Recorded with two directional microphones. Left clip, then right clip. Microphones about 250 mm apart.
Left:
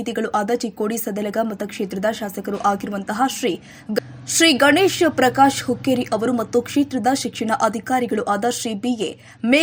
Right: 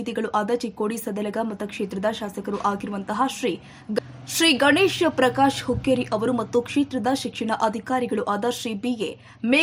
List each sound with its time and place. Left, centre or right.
0.0 s speech: centre